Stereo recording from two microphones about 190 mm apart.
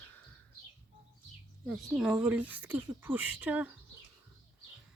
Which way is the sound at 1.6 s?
5° right (ahead or behind).